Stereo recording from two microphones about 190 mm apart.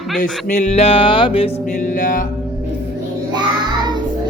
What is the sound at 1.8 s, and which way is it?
Music, 45° left (ahead or behind).